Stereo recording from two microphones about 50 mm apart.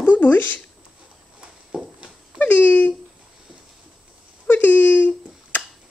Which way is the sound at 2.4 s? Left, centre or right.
Left.